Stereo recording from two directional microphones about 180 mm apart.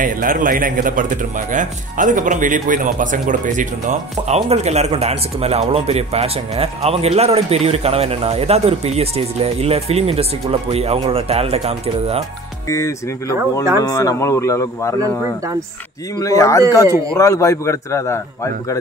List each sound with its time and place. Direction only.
0.0 s a man's voice: 50° right (ahead or behind); by 12.2 s 35° right (ahead or behind)
12.6 s a man's voice: 15° left (ahead or behind)
16.2 s a man's voice: 20° left (ahead or behind)